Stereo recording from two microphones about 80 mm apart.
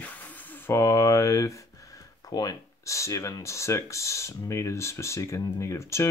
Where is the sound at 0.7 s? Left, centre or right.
Left.